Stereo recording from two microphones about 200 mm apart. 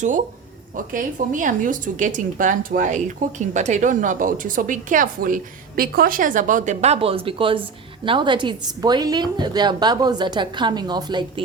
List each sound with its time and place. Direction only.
0.8 s a woman's voice: 40° right (ahead or behind); by 11.4 s 20° right (ahead or behind)